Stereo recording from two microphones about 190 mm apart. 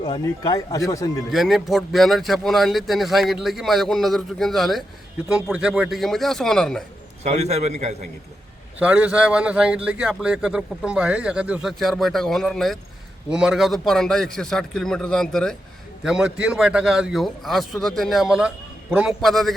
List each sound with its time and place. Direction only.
0.0 s a man's voice: 20° left (ahead or behind)
1.3 s a man's voice: centre (ahead or behind)
7.3 s a man's voice: 35° right (ahead or behind)
8.8 s a man's voice: 5° right (ahead or behind)